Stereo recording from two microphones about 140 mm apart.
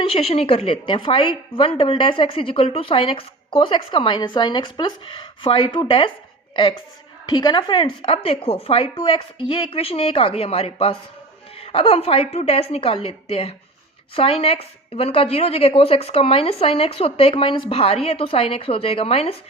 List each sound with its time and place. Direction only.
0.0 s a woman's voice: 40° left (ahead or behind)
7.3 s a woman's voice: 30° left (ahead or behind)